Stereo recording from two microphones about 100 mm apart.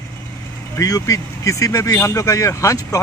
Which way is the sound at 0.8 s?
35° left (ahead or behind).